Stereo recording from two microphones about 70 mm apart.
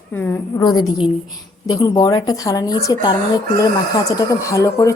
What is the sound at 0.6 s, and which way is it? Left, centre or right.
Speech, left.